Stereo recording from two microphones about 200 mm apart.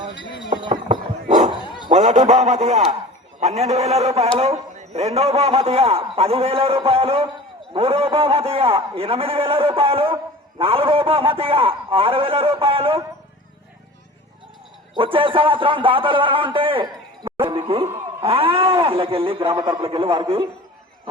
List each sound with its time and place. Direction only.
0.6 s a sound: 25° right (ahead or behind)
1.6 s dog: 20° left (ahead or behind)
1.9 s a man's voice: 35° right (ahead or behind)
14.9 s a man's voice: 25° right (ahead or behind)